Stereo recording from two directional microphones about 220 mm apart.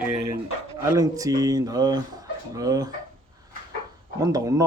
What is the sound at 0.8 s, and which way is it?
Speech, 15° right (ahead or behind).